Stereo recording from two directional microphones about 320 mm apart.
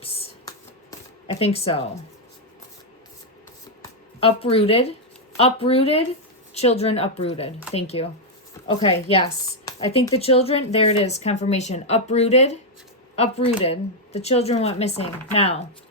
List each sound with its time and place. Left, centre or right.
0.0 s shuffling cards: centre
3.8 s speech: centre